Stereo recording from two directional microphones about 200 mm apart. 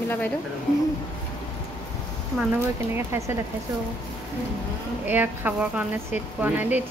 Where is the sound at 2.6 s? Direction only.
15° right (ahead or behind).